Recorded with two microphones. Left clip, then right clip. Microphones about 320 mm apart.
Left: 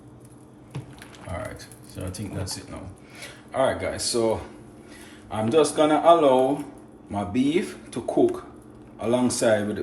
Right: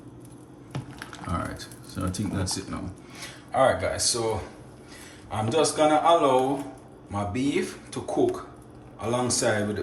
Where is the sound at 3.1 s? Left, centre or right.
Centre.